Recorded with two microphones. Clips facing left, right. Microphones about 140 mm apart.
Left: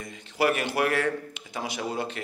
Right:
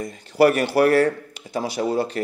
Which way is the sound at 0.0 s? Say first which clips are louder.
Right 9 dB; 40° right (ahead or behind).